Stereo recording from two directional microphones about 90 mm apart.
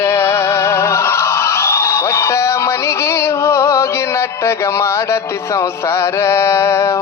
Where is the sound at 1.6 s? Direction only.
30° left (ahead or behind).